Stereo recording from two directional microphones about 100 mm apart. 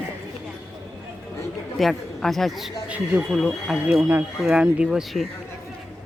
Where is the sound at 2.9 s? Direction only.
15° right (ahead or behind).